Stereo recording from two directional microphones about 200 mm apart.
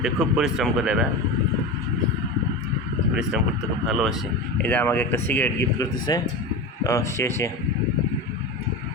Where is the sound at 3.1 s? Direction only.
5° right (ahead or behind); by 7.4 s 15° left (ahead or behind).